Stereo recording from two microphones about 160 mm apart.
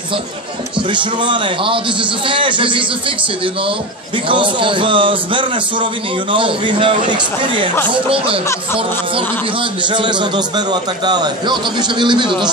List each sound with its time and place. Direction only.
0.8 s a man's voice: 30° right (ahead or behind)
4.3 s a man's voice: 30° right (ahead or behind)